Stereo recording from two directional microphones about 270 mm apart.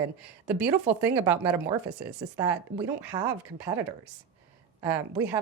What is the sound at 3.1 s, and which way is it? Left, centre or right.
Speech, centre.